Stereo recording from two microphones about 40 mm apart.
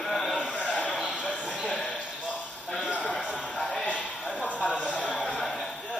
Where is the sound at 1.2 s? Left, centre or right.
Left.